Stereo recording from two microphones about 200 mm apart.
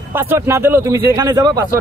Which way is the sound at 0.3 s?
10° right (ahead or behind).